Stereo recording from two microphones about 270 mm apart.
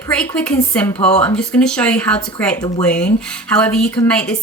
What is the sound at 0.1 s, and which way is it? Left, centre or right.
A woman's voice, centre.